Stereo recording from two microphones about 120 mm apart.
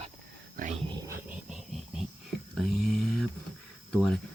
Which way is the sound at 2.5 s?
Centre (ahead or behind).